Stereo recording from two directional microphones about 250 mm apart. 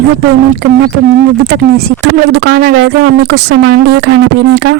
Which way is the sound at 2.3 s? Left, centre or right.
Right.